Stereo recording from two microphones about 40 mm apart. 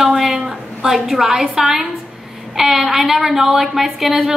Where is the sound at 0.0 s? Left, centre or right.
Centre.